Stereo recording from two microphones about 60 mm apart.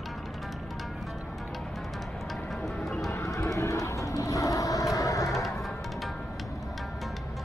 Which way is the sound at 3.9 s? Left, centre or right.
Left.